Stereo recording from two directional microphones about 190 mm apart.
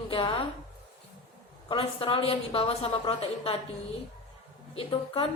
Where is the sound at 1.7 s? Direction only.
25° left (ahead or behind).